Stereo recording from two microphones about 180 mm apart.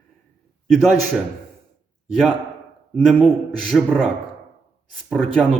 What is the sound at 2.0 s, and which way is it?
A man's voice, centre (ahead or behind).